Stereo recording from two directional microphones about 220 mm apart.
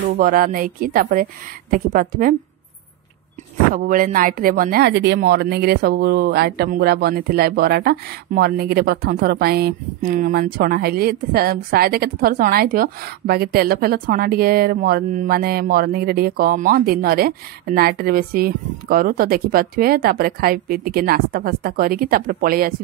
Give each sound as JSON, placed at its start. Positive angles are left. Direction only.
{"t": 0.0, "sound": "speech", "side_deg": -40}
{"t": 3.7, "sound": "speech", "side_deg": -40}